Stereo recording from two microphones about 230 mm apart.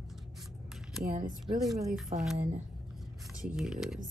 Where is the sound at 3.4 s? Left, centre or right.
Centre.